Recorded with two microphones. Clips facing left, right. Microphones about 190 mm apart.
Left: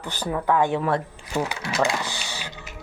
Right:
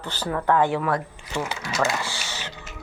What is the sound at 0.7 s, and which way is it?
Speech, 25° left (ahead or behind).